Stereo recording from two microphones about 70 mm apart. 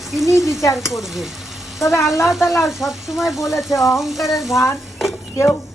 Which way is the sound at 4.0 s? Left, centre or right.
Centre.